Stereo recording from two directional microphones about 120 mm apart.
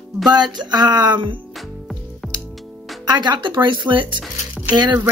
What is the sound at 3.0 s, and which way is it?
Speech, 35° right (ahead or behind).